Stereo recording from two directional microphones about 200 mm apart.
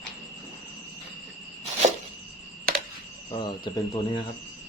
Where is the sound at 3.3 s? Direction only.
25° left (ahead or behind).